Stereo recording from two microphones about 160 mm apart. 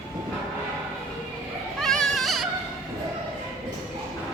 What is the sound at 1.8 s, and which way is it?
Goat, centre (ahead or behind).